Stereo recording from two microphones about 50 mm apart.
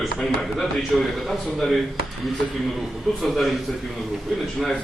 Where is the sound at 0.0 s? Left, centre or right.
Centre.